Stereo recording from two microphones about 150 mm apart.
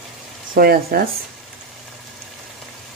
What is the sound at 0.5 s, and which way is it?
Speech, 90° right.